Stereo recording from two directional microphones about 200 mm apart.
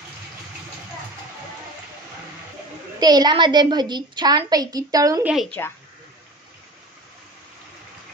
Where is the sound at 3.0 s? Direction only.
20° right (ahead or behind).